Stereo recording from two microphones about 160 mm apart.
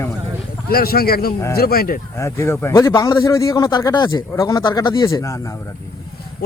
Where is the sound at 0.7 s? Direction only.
70° left (ahead or behind).